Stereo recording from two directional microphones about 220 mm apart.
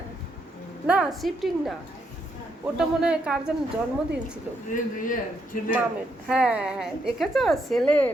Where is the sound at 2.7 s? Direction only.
5° right (ahead or behind).